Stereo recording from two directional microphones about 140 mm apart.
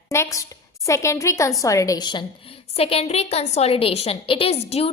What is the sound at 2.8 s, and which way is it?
A woman's voice, 45° left (ahead or behind).